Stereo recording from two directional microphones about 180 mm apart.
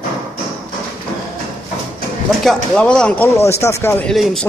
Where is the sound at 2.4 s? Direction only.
5° left (ahead or behind).